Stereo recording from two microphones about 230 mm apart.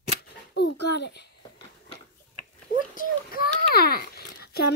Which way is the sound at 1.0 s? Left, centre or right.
Left.